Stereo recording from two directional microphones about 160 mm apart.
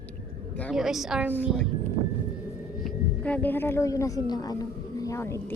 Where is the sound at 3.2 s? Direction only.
10° left (ahead or behind).